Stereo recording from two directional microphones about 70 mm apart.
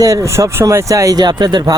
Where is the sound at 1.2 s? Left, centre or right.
Right.